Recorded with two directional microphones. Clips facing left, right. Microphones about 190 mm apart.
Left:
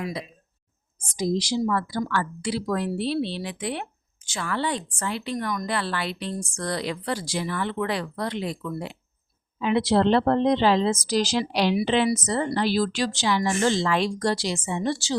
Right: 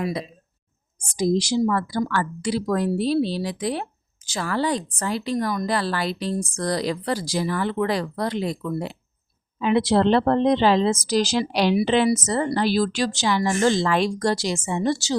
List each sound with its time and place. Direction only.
1.1 s a woman's voice: 45° right (ahead or behind)
9.6 s a woman's voice: 50° right (ahead or behind)